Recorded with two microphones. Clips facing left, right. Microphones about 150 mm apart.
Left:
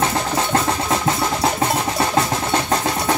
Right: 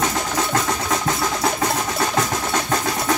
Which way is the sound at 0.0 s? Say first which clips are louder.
Left 2 dB; 30° left (ahead or behind).